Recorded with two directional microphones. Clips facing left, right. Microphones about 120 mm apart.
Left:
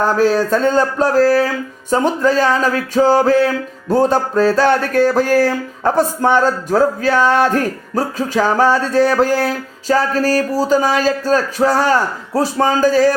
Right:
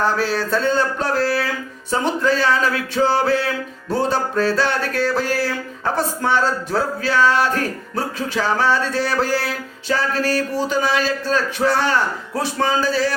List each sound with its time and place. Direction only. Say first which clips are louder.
0.0 s speech: left 6 dB; 45° left (ahead or behind)